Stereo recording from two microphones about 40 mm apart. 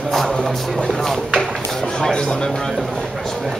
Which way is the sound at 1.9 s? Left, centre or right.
Left.